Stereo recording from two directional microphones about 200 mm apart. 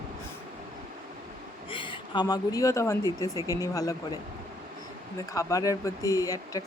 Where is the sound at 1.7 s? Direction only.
25° left (ahead or behind).